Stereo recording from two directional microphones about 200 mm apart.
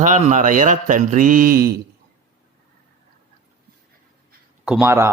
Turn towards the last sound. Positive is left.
turn(degrees=-10)  # may be behind; listen again after turning